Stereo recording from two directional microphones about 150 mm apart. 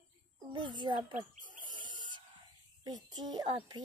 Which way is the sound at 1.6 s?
30° right (ahead or behind).